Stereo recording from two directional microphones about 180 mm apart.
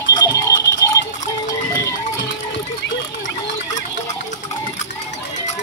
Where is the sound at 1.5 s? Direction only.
20° left (ahead or behind).